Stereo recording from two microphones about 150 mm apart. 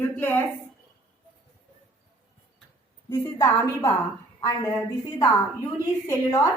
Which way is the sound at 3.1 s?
20° left (ahead or behind).